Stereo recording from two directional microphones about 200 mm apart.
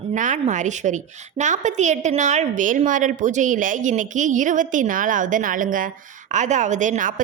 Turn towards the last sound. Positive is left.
turn(degrees=-40)  # may be behind; listen again after turning